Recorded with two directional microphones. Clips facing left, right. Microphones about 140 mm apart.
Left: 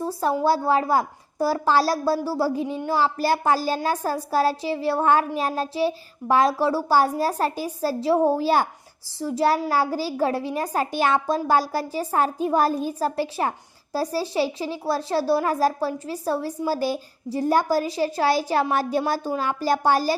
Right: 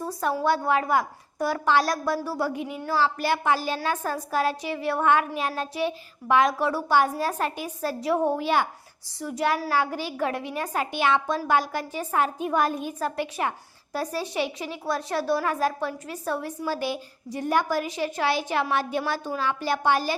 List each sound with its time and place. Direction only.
0.0 s a woman's voice: 30° left (ahead or behind)